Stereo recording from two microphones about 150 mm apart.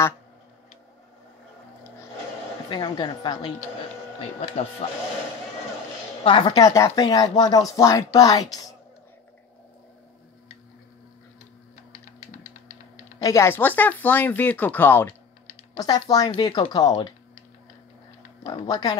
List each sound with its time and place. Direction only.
2.7 s a woman's voice: 30° left (ahead or behind)
4.8 s a woman's voice: 40° left (ahead or behind)
6.2 s speech: 30° left (ahead or behind)
13.2 s speech: 20° left (ahead or behind)
15.7 s speech: 25° left (ahead or behind)
18.7 s speech: 25° left (ahead or behind)